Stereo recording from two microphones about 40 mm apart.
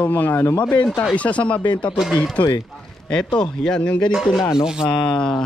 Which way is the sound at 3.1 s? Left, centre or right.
Centre.